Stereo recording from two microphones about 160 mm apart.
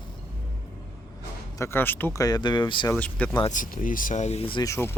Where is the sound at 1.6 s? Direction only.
15° left (ahead or behind).